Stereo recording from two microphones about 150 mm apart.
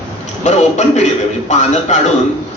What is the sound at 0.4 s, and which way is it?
A man's voice, 50° left (ahead or behind).